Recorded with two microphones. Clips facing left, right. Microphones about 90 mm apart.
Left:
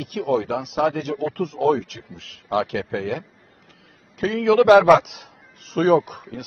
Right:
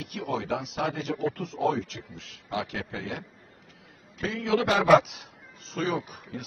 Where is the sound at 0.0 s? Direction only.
70° left (ahead or behind).